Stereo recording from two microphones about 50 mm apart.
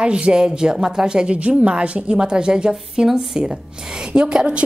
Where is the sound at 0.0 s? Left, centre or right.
Centre.